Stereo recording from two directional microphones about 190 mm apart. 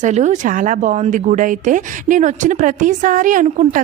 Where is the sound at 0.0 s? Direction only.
40° right (ahead or behind).